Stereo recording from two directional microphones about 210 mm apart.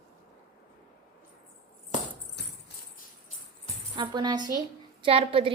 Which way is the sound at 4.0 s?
20° right (ahead or behind).